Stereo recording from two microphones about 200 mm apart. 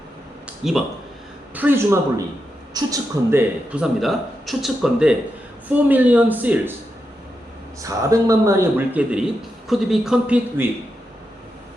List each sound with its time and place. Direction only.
0.4 s a sound: centre (ahead or behind)
1.5 s a man's voice: 10° right (ahead or behind)
3.7 s a man's voice: 5° right (ahead or behind)
7.8 s a man's voice: 15° right (ahead or behind)